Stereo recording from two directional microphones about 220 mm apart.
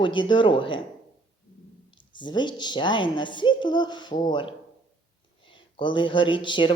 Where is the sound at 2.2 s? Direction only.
20° left (ahead or behind).